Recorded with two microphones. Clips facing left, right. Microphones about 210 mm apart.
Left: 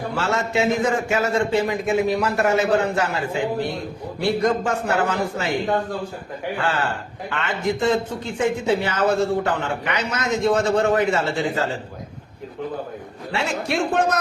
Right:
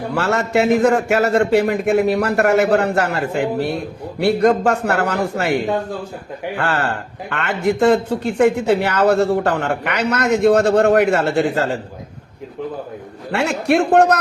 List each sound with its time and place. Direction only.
0.1 s a man's voice: 65° right (ahead or behind)
6.6 s a man's voice: 65° right (ahead or behind)
13.3 s a man's voice: 60° right (ahead or behind)